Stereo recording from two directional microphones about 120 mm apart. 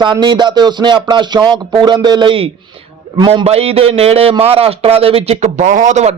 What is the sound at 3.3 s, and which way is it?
Speech, 60° right (ahead or behind).